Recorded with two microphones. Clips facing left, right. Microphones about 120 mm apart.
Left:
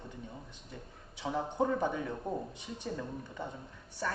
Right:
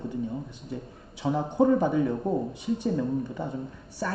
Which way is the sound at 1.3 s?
25° right (ahead or behind).